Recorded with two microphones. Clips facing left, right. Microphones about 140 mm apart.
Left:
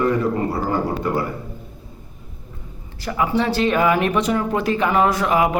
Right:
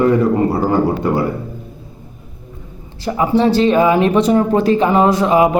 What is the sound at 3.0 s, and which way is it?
Speech, 30° right (ahead or behind).